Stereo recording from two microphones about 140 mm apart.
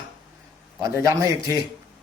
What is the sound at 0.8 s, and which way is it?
Speech, 25° right (ahead or behind).